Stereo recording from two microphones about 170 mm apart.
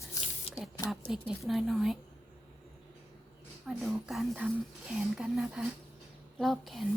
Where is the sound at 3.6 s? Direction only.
Centre (ahead or behind).